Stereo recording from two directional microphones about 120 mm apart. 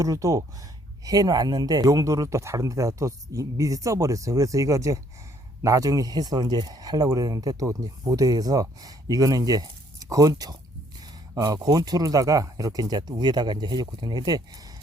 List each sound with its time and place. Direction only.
0.0 s speech: 25° right (ahead or behind)